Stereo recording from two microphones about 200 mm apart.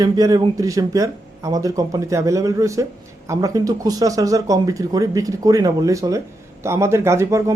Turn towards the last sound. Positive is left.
turn(degrees=-15)  # may be behind; listen again after turning